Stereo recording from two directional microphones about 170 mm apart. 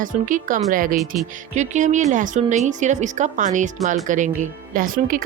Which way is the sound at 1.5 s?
45° right (ahead or behind).